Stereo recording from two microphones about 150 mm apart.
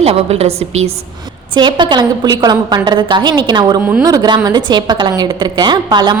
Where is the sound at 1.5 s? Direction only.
30° right (ahead or behind).